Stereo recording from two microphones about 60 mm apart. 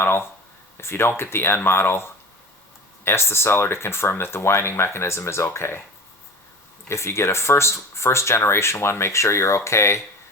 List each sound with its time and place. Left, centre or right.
0.0 s speech: left
6.8 s speech: left